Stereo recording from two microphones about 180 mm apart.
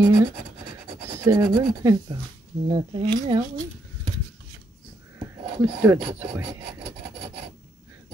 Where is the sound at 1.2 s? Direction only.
25° right (ahead or behind).